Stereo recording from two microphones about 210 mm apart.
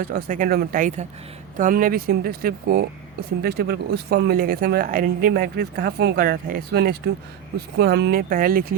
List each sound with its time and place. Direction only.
0.0 s speech: 45° right (ahead or behind)